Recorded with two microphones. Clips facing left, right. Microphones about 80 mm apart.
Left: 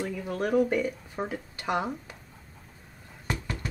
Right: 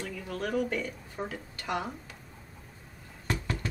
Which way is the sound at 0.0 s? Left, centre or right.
Centre.